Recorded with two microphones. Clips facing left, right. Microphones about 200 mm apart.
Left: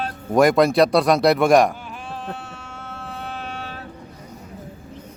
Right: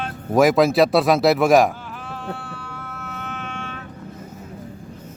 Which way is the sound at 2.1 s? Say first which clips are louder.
Right 1 dB; 20° left (ahead or behind).